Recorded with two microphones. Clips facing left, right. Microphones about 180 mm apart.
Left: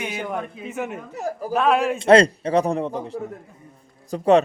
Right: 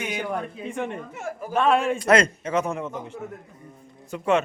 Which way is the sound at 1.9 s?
30° left (ahead or behind).